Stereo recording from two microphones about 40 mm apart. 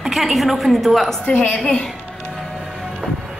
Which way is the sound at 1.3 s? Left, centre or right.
Left.